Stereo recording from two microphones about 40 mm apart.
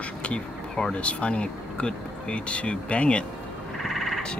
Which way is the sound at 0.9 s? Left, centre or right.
Left.